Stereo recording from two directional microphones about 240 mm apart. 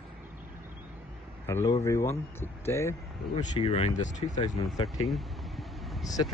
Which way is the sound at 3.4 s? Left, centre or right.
Left.